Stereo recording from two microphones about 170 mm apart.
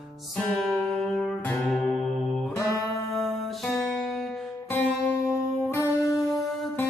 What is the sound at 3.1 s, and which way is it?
Music, centre (ahead or behind).